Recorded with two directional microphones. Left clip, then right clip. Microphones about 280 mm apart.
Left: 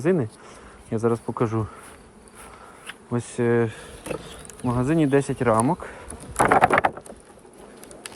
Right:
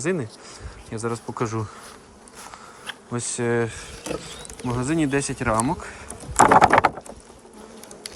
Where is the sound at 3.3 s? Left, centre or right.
Centre.